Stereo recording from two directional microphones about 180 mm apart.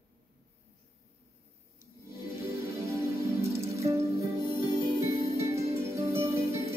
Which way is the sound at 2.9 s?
15° right (ahead or behind).